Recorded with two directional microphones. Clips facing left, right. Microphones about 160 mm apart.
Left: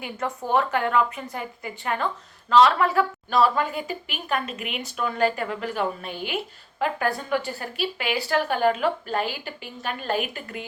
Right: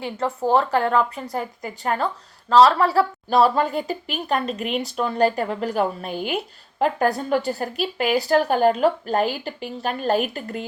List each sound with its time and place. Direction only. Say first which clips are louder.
0.0 s a woman's voice: right 6 dB; 30° right (ahead or behind)